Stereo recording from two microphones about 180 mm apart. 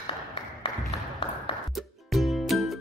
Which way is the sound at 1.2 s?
30° left (ahead or behind).